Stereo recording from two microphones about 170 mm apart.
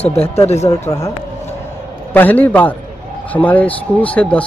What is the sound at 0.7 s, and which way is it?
Speech, 20° left (ahead or behind).